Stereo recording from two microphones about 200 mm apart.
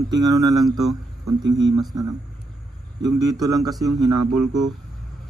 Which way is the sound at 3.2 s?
20° right (ahead or behind).